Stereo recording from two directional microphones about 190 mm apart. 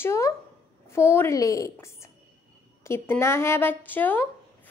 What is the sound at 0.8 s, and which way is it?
Speech, 15° left (ahead or behind).